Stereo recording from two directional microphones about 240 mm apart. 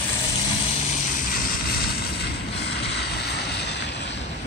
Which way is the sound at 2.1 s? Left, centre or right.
Left.